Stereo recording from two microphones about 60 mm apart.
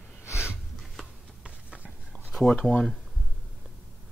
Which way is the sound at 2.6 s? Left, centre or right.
Centre.